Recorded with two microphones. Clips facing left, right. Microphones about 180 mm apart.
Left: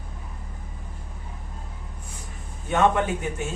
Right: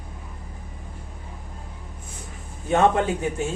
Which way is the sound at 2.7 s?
30° right (ahead or behind).